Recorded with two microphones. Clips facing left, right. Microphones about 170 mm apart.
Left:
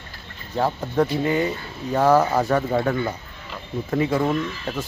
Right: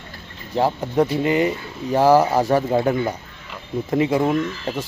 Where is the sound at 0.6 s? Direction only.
15° right (ahead or behind).